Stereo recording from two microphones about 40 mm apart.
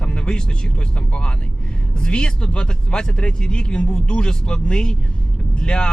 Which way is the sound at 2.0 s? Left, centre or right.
Left.